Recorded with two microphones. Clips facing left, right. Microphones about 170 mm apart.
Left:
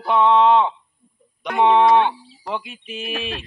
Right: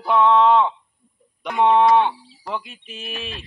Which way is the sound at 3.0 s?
65° left (ahead or behind).